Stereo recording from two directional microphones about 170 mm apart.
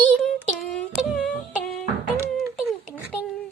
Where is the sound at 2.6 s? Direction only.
Centre (ahead or behind).